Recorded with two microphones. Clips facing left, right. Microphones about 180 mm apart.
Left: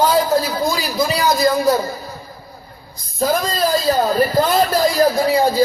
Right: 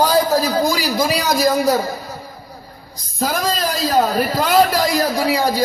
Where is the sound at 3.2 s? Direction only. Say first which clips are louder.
Left 2 dB; 90° right.